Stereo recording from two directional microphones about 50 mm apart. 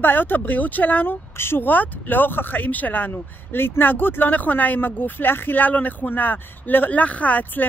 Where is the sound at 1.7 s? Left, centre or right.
Left.